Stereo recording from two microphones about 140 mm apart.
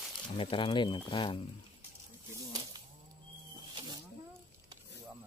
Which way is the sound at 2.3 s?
30° right (ahead or behind).